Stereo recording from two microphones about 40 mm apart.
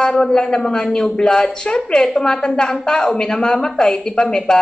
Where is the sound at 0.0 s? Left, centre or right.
Centre.